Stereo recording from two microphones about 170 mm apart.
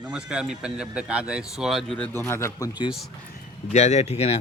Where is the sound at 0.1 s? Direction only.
5° right (ahead or behind).